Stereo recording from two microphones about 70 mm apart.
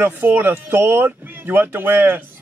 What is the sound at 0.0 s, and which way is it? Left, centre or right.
A man's voice, right.